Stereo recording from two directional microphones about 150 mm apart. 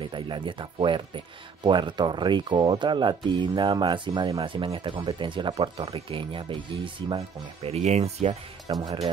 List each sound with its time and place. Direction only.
0.0 s speech: 30° right (ahead or behind)
4.4 s speech: 35° right (ahead or behind)
8.7 s speech: 35° right (ahead or behind)